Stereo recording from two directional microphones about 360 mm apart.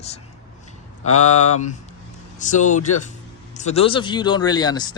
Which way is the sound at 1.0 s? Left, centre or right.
Left.